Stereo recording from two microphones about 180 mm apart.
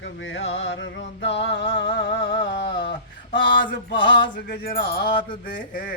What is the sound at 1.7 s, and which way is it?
Music, 30° left (ahead or behind).